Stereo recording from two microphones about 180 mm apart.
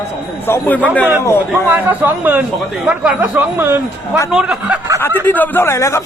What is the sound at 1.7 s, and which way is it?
A man's voice, 10° right (ahead or behind).